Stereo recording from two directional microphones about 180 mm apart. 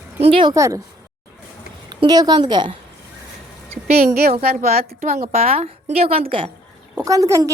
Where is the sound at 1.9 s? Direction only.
25° right (ahead or behind).